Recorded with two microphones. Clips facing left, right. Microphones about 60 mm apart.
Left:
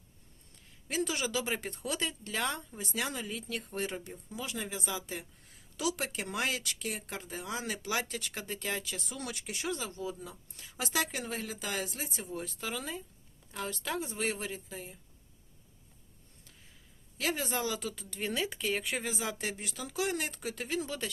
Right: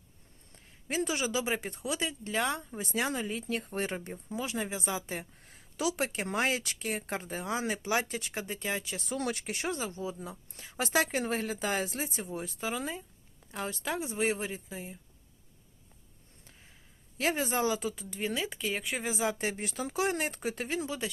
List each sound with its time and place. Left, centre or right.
0.5 s speech: right; by 2.6 s centre
2.7 s speech: right
5.4 s a sound: right
5.8 s speech: right
9.0 s speech: right
9.7 s speech: right
17.2 s speech: right; by 19.0 s centre
19.0 s speech: right
19.5 s speech: right
20.8 s speech: centre